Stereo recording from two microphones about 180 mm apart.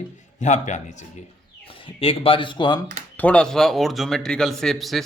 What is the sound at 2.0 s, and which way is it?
Speech, 30° left (ahead or behind).